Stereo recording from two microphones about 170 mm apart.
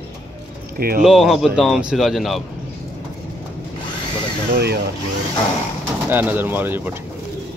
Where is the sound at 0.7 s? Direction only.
60° right (ahead or behind).